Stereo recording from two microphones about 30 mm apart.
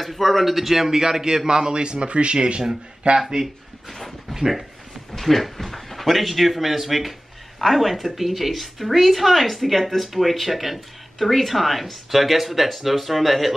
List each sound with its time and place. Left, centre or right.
0.0 s a man's voice: centre
1.5 s speech: right
3.2 s a man's voice: centre
5.1 s speech: centre